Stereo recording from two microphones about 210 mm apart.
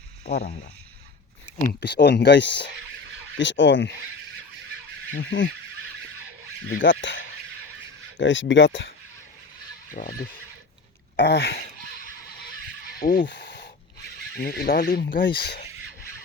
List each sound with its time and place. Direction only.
0.3 s speech: 35° left (ahead or behind)
1.8 s speech: 55° left (ahead or behind)
5.1 s speech: 60° left (ahead or behind)
6.7 s speech: 60° left (ahead or behind)
9.9 s speech: 40° left (ahead or behind)
11.2 s speech: 55° left (ahead or behind)
13.0 s a sound: 45° left (ahead or behind)
14.3 s speech: 45° left (ahead or behind)